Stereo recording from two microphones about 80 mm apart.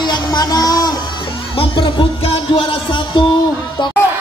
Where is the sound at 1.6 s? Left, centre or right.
Left.